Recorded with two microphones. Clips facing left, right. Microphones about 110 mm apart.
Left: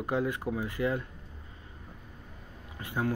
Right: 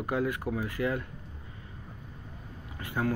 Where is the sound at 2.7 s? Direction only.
20° left (ahead or behind).